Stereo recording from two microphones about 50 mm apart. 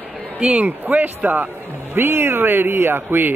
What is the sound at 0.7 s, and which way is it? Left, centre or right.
Speech, right.